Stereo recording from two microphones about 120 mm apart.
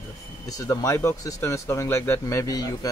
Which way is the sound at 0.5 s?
30° left (ahead or behind).